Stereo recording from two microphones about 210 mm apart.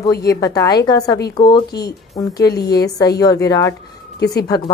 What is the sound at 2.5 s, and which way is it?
Speech, 50° left (ahead or behind).